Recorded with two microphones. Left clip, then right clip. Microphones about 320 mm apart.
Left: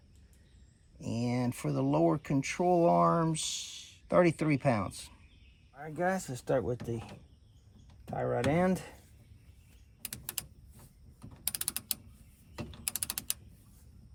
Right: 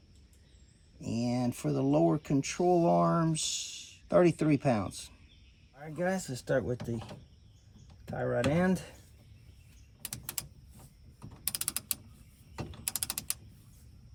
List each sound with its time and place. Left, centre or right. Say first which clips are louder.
1.0 s speech: right 1 dB; left
5.7 s speech: left 1 dB; centre
8.1 s speech: even; centre
11.4 s mechanisms: right 1 dB; centre